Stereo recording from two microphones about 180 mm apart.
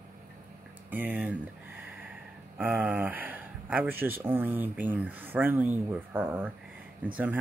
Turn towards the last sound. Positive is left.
turn(degrees=-10)  # may be behind; listen again after turning